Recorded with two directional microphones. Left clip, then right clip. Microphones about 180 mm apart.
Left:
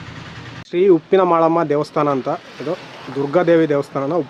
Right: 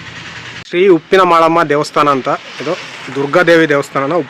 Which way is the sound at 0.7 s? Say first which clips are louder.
Right 4 dB; 5° left (ahead or behind).